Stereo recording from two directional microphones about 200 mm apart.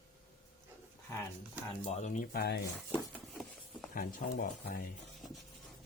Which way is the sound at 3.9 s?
45° left (ahead or behind).